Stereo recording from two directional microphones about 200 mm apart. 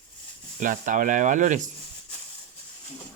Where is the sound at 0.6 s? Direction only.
40° right (ahead or behind).